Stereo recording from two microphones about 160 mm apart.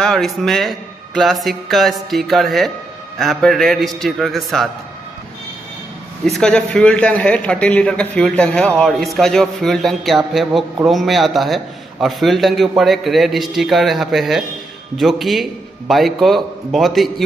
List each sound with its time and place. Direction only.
0.0 s a man's voice: centre (ahead or behind)
6.2 s a man's voice: centre (ahead or behind)